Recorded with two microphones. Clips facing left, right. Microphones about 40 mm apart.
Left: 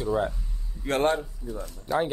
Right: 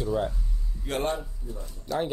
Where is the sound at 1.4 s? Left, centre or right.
Left.